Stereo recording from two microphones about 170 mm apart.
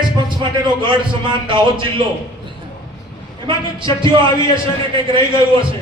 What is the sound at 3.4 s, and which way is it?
Speech, 30° right (ahead or behind).